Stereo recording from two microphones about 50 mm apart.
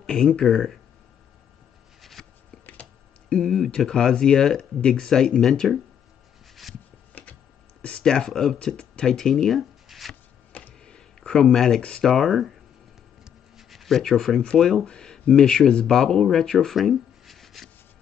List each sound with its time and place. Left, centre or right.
0.0 s speech: centre
2.0 s a sound: centre
3.3 s speech: centre
6.6 s wood: centre
8.0 s speech: centre
8.5 s speech: left; by 10.1 s centre
10.8 s a sound: centre
12.0 s speech: centre
13.2 s a sound: centre
14.4 s speech: centre